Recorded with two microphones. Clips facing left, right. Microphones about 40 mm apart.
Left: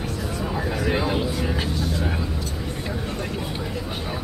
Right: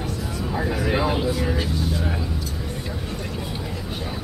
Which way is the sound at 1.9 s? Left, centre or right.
Centre.